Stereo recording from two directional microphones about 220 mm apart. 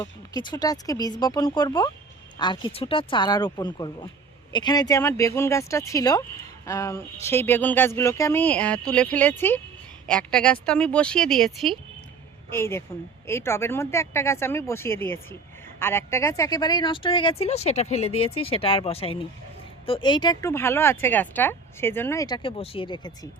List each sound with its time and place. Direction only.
0.0 s speech: 20° left (ahead or behind)